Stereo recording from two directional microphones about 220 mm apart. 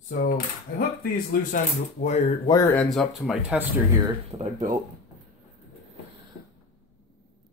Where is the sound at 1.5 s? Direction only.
35° left (ahead or behind).